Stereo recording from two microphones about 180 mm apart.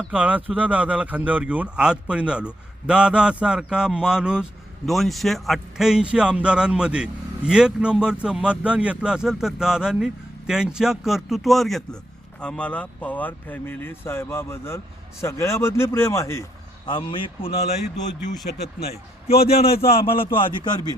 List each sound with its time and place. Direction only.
0.1 s a man's voice: 5° right (ahead or behind); by 17.5 s 25° left (ahead or behind)
18.5 s speech: 45° left (ahead or behind)
19.4 s a man's voice: 35° left (ahead or behind)